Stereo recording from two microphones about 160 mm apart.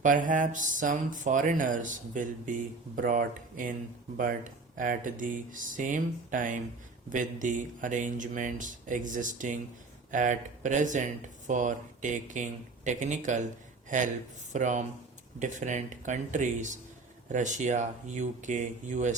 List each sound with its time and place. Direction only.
0.0 s speech: 55° right (ahead or behind)
4.8 s speech: 55° right (ahead or behind)